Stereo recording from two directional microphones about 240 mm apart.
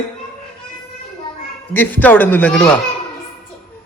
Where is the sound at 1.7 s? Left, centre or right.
Centre.